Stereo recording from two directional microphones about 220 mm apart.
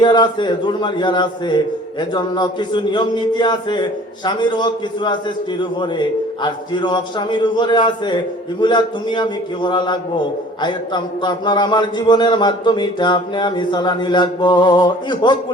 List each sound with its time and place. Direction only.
0.0 s speech: 20° left (ahead or behind)